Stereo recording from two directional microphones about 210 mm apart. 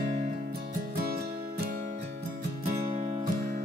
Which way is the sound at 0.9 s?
50° right (ahead or behind).